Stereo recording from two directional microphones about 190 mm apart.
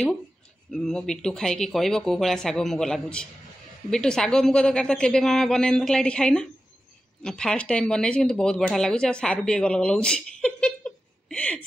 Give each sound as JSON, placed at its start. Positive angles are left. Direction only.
{"t": 0.7, "sound": "speech", "side_deg": 5}